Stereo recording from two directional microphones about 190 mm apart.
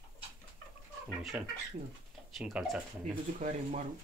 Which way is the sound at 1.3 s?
5° right (ahead or behind).